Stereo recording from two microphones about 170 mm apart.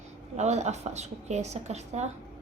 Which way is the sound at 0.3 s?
40° right (ahead or behind).